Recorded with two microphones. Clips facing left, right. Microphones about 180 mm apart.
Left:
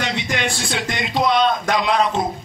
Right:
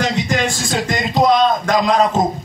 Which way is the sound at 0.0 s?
40° right (ahead or behind).